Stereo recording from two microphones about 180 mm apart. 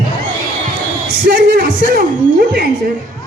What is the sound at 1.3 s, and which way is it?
Music, 60° right (ahead or behind).